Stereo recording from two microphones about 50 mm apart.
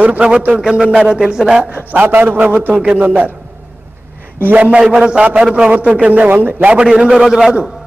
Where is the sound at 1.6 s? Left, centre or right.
Right.